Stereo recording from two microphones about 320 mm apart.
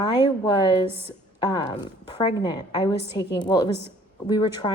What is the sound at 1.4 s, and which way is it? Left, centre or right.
A woman's voice, centre.